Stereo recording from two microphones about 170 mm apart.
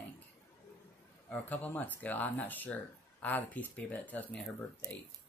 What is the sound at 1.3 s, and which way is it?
Speech, 10° left (ahead or behind).